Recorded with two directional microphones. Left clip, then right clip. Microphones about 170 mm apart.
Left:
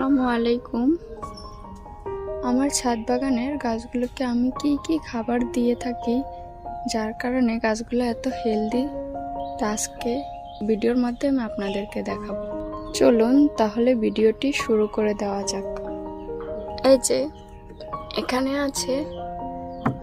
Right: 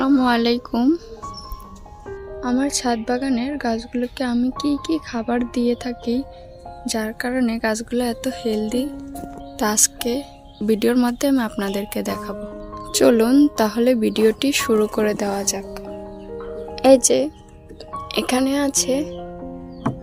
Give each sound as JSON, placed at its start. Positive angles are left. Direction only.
{"t": 0.0, "sound": "a woman's voice", "side_deg": -10}
{"t": 2.4, "sound": "a woman's voice", "side_deg": -15}
{"t": 16.8, "sound": "speech", "side_deg": -20}